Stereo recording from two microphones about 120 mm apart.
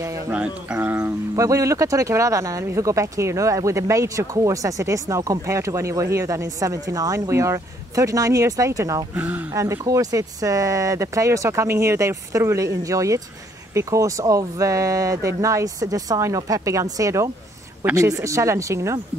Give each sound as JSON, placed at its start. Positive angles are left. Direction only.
{"t": 0.7, "sound": "speech", "side_deg": -15}
{"t": 9.1, "sound": "speech", "side_deg": -15}
{"t": 9.6, "sound": "speech", "side_deg": -25}